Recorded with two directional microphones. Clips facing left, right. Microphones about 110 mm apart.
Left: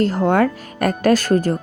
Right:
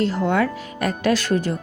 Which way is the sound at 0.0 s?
45° left (ahead or behind).